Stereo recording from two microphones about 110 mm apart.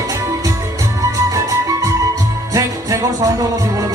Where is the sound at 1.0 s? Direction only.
30° right (ahead or behind).